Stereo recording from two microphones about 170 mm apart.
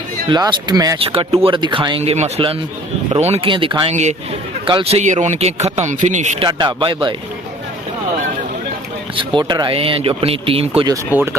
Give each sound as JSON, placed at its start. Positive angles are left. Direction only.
{"t": 0.3, "sound": "speech", "side_deg": -25}
{"t": 0.9, "sound": "a man's voice", "side_deg": -30}
{"t": 6.4, "sound": "speech", "side_deg": -25}
{"t": 9.1, "sound": "speech", "side_deg": -25}